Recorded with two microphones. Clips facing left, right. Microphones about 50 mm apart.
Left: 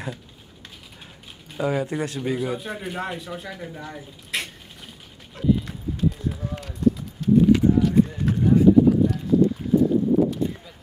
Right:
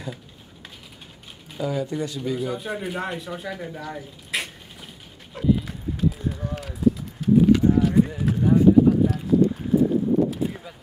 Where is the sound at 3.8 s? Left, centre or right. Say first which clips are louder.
Right 2 dB; centre.